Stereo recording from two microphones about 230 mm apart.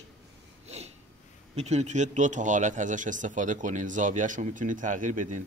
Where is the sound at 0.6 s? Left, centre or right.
Right.